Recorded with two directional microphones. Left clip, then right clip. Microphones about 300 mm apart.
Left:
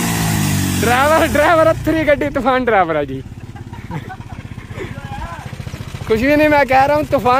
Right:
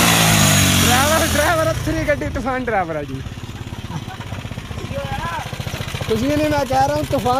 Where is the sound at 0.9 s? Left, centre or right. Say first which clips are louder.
Left 4 dB; left.